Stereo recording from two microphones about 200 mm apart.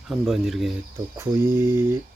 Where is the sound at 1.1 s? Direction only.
10° right (ahead or behind).